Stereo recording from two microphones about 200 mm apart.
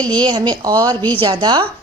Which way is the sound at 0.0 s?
20° right (ahead or behind).